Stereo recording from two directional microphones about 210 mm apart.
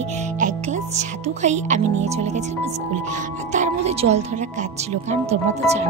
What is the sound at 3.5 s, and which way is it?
Speech, 30° right (ahead or behind).